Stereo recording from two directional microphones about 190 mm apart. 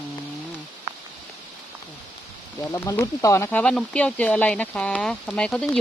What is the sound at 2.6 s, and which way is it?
Speech, 15° left (ahead or behind).